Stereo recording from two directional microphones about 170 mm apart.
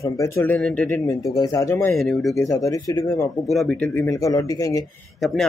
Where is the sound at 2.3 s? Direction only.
20° left (ahead or behind).